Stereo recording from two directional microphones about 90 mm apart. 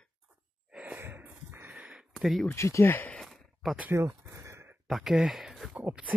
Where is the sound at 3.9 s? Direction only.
30° right (ahead or behind).